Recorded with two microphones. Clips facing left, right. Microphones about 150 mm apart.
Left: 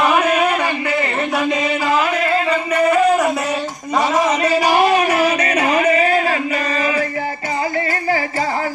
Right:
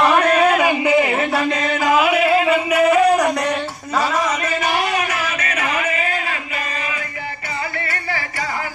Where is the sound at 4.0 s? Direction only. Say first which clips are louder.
Left 4 dB; 25° left (ahead or behind).